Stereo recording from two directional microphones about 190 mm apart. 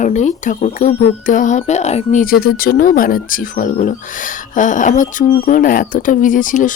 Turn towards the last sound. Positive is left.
turn(degrees=45)  # may be behind; listen again after turning